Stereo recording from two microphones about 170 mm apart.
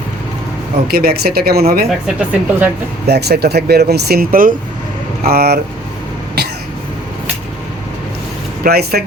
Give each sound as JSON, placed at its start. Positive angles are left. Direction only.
{"t": 0.9, "sound": "speech", "side_deg": -65}
{"t": 2.0, "sound": "speech", "side_deg": -10}
{"t": 3.1, "sound": "speech", "side_deg": -70}
{"t": 8.6, "sound": "speech", "side_deg": -65}